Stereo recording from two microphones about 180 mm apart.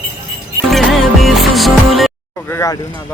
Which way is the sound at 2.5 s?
15° left (ahead or behind).